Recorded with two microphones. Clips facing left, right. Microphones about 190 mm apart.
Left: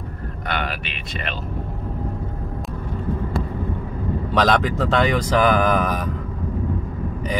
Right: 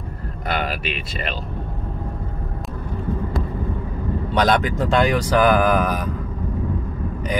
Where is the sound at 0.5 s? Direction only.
35° right (ahead or behind).